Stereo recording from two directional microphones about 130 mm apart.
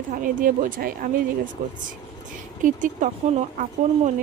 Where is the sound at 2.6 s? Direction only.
80° right.